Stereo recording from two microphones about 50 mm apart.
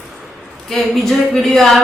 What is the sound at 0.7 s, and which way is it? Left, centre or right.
Speech, centre.